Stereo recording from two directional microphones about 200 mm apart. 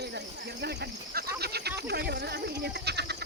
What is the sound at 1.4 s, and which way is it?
Frog, 55° right (ahead or behind).